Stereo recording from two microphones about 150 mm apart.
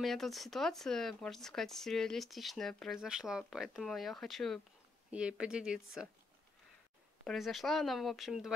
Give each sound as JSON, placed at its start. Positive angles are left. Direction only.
{"t": 0.0, "sound": "speech", "side_deg": 0}
{"t": 7.2, "sound": "speech", "side_deg": 0}